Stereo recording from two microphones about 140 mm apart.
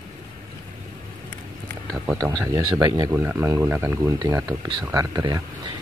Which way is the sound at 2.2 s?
20° right (ahead or behind).